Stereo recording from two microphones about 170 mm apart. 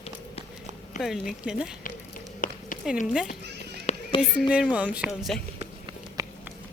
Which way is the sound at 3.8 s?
35° left (ahead or behind).